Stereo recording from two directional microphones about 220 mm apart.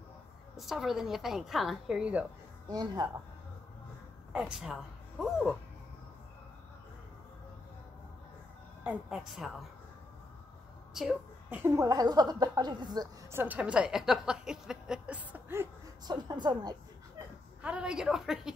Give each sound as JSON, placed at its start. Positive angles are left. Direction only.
{"t": 0.6, "sound": "a woman's voice", "side_deg": 0}
{"t": 2.7, "sound": "speech", "side_deg": -20}
{"t": 4.3, "sound": "a woman's voice", "side_deg": -5}
{"t": 8.8, "sound": "a woman's voice", "side_deg": 0}
{"t": 11.0, "sound": "speech", "side_deg": -5}
{"t": 17.6, "sound": "a woman's voice", "side_deg": -5}